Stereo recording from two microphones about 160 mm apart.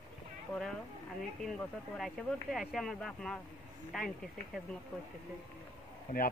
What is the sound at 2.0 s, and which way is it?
Speech, centre (ahead or behind).